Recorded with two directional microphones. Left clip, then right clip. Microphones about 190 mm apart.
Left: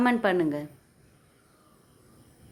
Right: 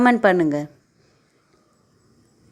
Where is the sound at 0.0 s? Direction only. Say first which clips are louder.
Right 8 dB; 30° right (ahead or behind).